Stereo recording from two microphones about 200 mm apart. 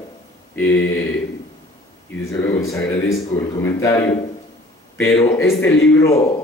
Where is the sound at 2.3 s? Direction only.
15° left (ahead or behind).